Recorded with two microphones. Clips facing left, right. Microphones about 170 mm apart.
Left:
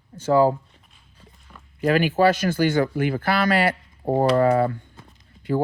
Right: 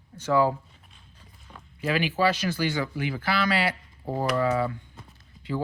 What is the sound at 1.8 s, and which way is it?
Speech, 50° left (ahead or behind).